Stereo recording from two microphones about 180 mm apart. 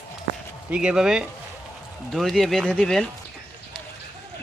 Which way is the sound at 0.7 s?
5° right (ahead or behind).